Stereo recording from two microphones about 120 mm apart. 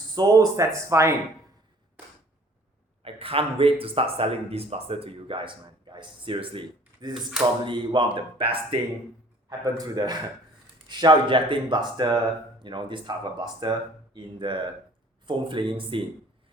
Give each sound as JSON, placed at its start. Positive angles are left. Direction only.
{"t": 0.2, "sound": "speech", "side_deg": -30}
{"t": 3.0, "sound": "speech", "side_deg": -50}
{"t": 9.5, "sound": "speech", "side_deg": -30}